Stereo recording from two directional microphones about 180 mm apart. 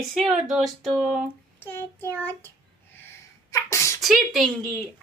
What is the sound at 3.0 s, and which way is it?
Sneeze, 15° left (ahead or behind).